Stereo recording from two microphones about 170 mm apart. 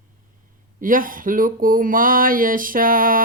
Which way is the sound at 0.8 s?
55° right (ahead or behind).